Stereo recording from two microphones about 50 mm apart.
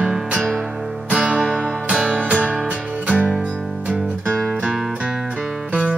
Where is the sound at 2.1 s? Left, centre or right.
Right.